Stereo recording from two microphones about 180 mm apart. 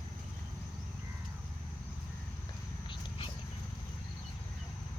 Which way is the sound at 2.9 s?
30° left (ahead or behind).